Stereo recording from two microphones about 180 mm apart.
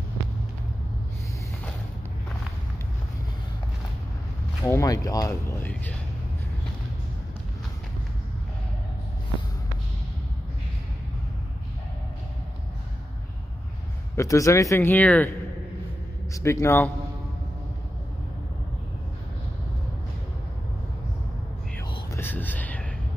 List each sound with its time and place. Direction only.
4.6 s speech: 15° left (ahead or behind)
14.1 s speech: 15° left (ahead or behind)
16.3 s speech: 15° left (ahead or behind)
22.1 s whispering: 10° left (ahead or behind)